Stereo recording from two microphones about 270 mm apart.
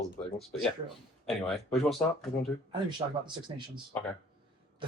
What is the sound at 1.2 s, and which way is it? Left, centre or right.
Speech, centre.